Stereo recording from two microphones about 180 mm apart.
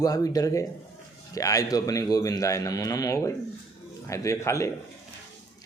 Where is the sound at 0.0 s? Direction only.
20° left (ahead or behind).